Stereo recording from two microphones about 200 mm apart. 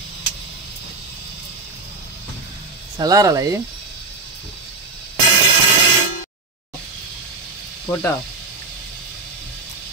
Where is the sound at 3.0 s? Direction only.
15° right (ahead or behind).